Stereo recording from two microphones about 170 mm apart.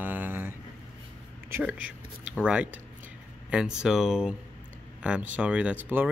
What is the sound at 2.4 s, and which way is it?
Speech, 5° right (ahead or behind).